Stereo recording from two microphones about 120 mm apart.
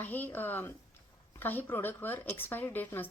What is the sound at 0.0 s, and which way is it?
A woman's voice, 15° left (ahead or behind).